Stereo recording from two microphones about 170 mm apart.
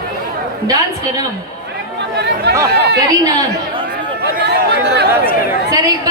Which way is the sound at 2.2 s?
80° right.